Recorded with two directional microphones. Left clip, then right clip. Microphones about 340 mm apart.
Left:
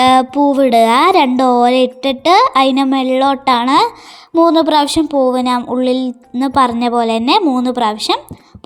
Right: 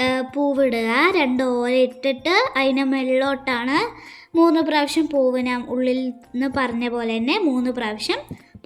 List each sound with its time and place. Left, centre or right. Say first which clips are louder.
0.0 s speech: left 11 dB; left